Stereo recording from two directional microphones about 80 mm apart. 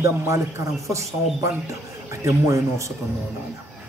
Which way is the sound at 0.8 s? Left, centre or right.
Right.